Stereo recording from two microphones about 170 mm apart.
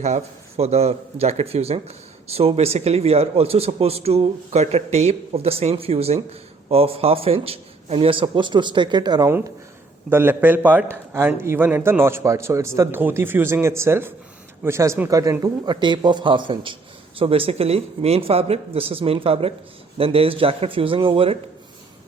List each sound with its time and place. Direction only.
0.0 s a man's voice: 40° right (ahead or behind); by 9.3 s 25° right (ahead or behind)
10.1 s a man's voice: 15° right (ahead or behind); by 21.3 s 35° right (ahead or behind)